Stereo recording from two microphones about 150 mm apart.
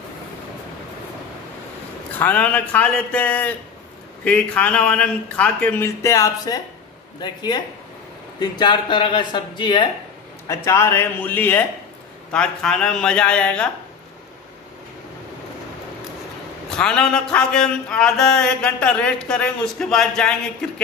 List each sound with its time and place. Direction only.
2.1 s a man's voice: 10° left (ahead or behind); by 9.8 s 30° left (ahead or behind)
10.5 s a man's voice: 20° left (ahead or behind)
16.6 s a sound: 5° left (ahead or behind)